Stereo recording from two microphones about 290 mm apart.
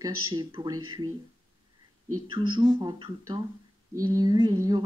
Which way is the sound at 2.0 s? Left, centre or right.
Right.